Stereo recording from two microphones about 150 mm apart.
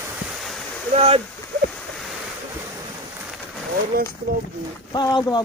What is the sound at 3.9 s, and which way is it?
Speech, 80° right.